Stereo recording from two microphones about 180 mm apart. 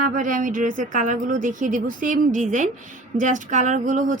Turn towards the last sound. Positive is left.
turn(degrees=-45)  # may be behind; listen again after turning